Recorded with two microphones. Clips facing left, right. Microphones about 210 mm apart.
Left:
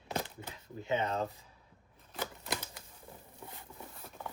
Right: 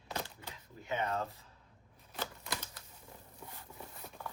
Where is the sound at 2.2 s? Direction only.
15° left (ahead or behind).